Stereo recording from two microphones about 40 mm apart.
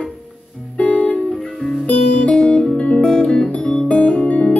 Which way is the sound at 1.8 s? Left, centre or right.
Left.